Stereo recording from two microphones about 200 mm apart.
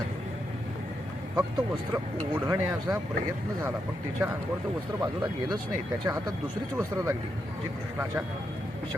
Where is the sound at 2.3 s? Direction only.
10° right (ahead or behind).